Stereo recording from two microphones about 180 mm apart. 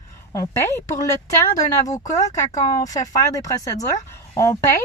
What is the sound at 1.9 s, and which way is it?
Speech, 20° left (ahead or behind).